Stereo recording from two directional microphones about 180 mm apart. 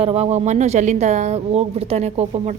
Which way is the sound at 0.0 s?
35° right (ahead or behind).